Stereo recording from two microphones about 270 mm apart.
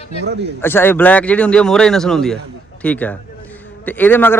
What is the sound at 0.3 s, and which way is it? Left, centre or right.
Speech, right.